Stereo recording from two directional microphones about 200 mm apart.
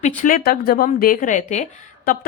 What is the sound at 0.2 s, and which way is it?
Speech, 45° left (ahead or behind).